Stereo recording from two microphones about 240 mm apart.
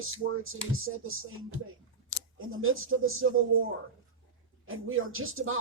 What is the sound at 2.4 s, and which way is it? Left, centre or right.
Music, right.